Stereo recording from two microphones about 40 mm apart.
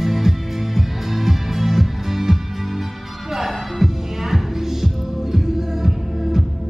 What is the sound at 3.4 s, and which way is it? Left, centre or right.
Music, centre.